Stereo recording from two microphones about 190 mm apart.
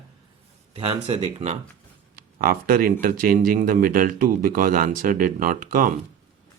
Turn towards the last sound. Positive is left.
turn(degrees=-45)  # may be behind; listen again after turning